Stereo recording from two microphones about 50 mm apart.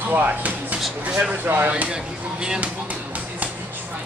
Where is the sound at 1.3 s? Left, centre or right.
Right.